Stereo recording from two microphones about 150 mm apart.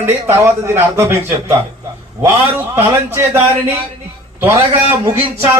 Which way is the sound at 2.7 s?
15° right (ahead or behind).